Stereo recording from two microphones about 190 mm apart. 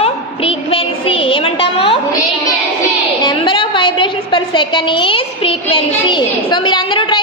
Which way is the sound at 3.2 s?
25° left (ahead or behind).